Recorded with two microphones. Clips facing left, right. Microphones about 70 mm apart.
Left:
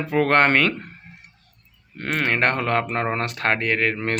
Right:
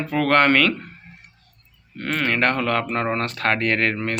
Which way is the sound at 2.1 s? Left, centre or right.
Left.